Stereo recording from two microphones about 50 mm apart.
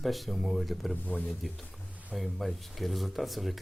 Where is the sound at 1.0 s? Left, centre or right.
Left.